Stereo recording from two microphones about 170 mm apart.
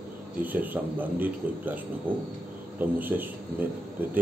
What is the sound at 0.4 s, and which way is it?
Speech, 10° right (ahead or behind).